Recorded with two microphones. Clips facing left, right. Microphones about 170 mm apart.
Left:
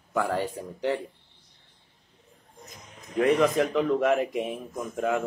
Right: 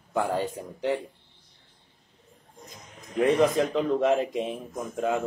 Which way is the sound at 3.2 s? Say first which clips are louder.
Even; 20° right (ahead or behind).